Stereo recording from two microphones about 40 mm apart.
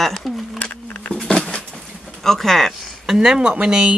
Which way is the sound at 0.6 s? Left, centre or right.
Left.